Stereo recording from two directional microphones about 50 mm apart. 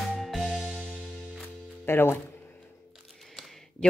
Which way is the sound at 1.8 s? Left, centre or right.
Left.